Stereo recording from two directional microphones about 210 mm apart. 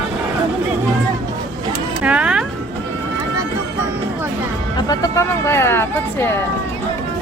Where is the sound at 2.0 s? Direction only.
5° right (ahead or behind).